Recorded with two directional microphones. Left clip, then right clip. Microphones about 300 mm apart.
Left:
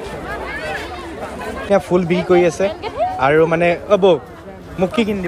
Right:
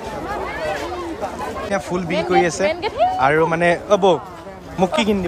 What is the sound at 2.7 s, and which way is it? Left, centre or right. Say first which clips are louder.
Speech: right 2 dB; right.